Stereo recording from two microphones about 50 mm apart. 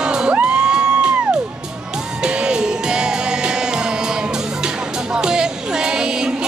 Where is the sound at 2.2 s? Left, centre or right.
Centre.